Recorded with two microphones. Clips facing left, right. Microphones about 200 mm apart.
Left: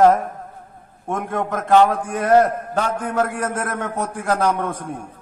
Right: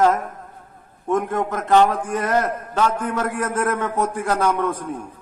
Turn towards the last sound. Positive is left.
turn(degrees=45)  # may be behind; listen again after turning